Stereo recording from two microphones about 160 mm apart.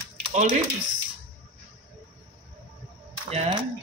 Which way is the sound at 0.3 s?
45° right (ahead or behind).